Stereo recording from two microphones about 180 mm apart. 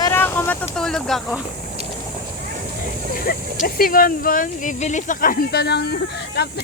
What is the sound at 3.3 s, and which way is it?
Speech, 55° left (ahead or behind).